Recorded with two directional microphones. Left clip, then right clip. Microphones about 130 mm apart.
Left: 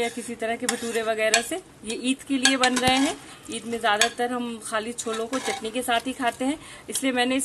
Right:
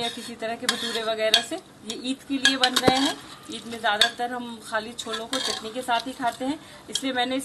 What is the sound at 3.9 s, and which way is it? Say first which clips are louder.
Speech: even; 65° left (ahead or behind).